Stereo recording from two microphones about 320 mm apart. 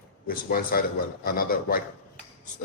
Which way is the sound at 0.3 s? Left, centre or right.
Left.